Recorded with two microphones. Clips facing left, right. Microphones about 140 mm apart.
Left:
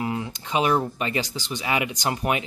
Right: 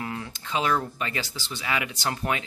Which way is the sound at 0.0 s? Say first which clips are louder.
Left 6 dB; 20° left (ahead or behind).